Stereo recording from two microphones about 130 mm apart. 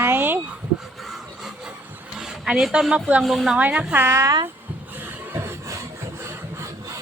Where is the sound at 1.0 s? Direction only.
Centre (ahead or behind).